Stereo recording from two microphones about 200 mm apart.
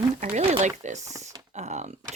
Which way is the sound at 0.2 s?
35° right (ahead or behind).